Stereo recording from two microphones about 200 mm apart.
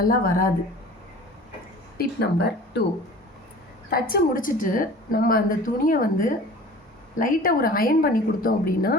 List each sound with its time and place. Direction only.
0.0 s a woman's voice: 45° left (ahead or behind)
2.0 s speech: 55° left (ahead or behind)
3.8 s a woman's voice: 50° left (ahead or behind)